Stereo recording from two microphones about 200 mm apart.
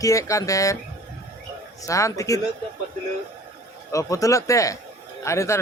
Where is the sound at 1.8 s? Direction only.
15° left (ahead or behind).